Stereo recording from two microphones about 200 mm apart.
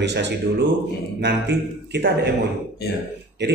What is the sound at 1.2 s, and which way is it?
Speech, 60° right (ahead or behind).